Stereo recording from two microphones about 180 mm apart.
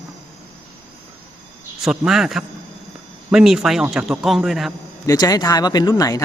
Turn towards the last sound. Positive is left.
turn(degrees=20)  # may be behind; listen again after turning